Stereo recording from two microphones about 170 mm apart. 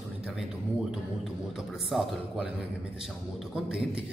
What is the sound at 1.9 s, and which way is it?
Speech, 5° right (ahead or behind).